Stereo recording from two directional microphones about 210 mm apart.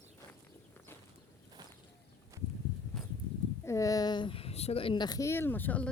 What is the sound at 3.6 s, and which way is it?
A woman's voice, 15° left (ahead or behind).